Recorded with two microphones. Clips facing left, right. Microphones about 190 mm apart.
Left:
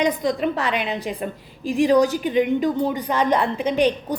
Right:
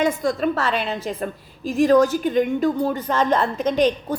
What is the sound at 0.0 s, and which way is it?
A woman's voice, 20° left (ahead or behind).